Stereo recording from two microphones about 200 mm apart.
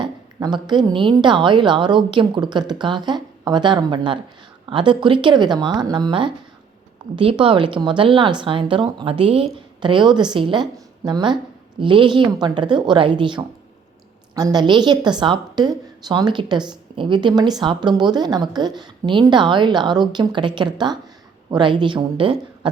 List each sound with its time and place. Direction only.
0.0 s a woman's voice: 20° right (ahead or behind)